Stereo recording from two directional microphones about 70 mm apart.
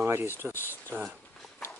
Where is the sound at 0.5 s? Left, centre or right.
Left.